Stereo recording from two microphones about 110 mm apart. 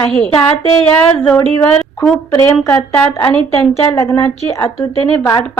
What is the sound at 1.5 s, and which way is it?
A woman's voice, 20° left (ahead or behind).